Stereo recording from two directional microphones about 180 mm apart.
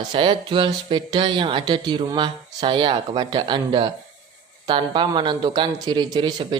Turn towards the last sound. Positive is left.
turn(degrees=-25)  # may be behind; listen again after turning